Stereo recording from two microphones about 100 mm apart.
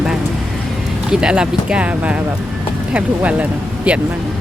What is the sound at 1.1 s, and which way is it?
Speech, 10° right (ahead or behind).